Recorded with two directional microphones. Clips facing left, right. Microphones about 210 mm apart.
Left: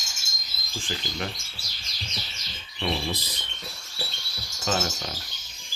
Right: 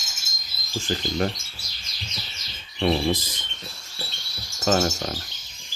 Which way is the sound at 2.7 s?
45° right (ahead or behind).